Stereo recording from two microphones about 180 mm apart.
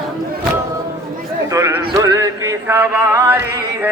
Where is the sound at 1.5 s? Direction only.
15° right (ahead or behind).